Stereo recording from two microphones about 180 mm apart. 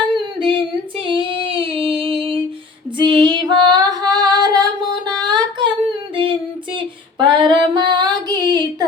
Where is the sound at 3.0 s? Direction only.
25° right (ahead or behind).